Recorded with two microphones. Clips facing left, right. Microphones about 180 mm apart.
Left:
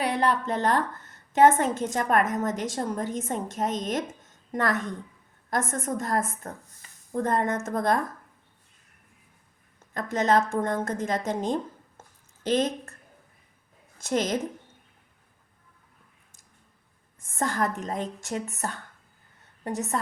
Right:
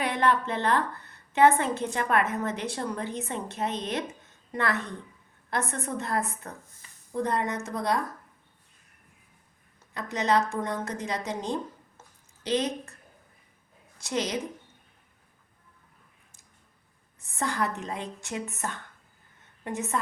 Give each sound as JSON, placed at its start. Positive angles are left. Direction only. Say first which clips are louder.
{"t": 0.0, "sound": "a woman's voice", "louder": "left 1 dB", "side_deg": 35}
{"t": 4.2, "sound": "a sound", "louder": "left 2 dB", "side_deg": 45}
{"t": 5.7, "sound": "a woman's voice", "louder": "left 3 dB", "side_deg": 45}
{"t": 9.9, "sound": "a woman's voice", "louder": "left 3 dB", "side_deg": 45}
{"t": 11.9, "sound": "a sound", "louder": "left 2 dB", "side_deg": 50}
{"t": 14.1, "sound": "a woman's voice", "louder": "left 4 dB", "side_deg": 50}
{"t": 17.3, "sound": "a woman's voice", "louder": "left 2 dB", "side_deg": 45}